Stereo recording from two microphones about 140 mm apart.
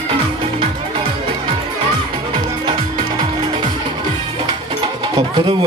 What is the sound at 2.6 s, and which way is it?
Music, 35° right (ahead or behind).